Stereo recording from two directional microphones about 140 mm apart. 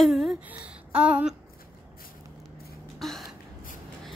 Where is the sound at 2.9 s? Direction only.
Centre (ahead or behind).